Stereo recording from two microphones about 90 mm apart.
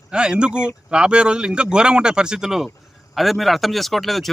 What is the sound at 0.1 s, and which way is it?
A man's voice, 10° right (ahead or behind).